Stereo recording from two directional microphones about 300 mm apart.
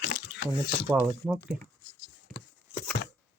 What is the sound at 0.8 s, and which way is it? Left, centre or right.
Speech, centre.